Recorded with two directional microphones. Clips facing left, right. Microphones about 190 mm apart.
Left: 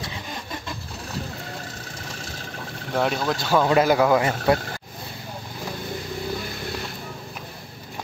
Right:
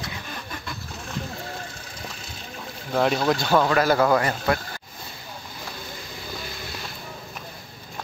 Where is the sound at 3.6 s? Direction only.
15° left (ahead or behind).